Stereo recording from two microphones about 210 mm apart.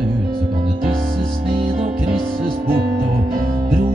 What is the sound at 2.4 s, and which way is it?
Music, 45° right (ahead or behind).